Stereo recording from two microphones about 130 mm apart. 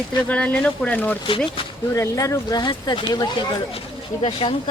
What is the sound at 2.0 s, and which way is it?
Speech, 25° left (ahead or behind).